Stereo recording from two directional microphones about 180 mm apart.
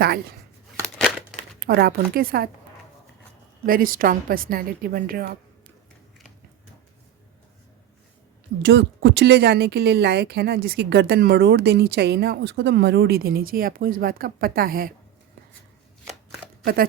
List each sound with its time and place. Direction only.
0.9 s crumpling: 5° left (ahead or behind)
1.5 s speech: 60° right (ahead or behind)
3.7 s a woman's voice: 50° right (ahead or behind)
8.6 s speech: 75° right (ahead or behind); by 14.9 s 55° right (ahead or behind)